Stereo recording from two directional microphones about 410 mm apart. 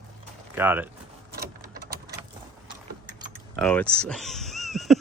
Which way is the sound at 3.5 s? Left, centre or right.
Centre.